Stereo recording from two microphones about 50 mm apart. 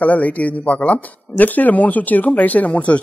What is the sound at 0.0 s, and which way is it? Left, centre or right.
Speech, left.